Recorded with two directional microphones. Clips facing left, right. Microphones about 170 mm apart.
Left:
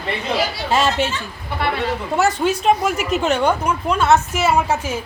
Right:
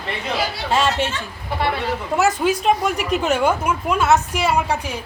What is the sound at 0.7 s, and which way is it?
Speech, 5° left (ahead or behind).